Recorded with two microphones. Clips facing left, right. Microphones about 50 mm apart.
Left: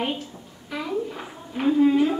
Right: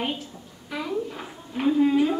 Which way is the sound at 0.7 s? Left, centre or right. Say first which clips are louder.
Left 1 dB; centre.